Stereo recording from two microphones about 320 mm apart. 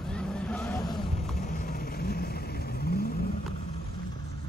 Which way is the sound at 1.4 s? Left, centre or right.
Left.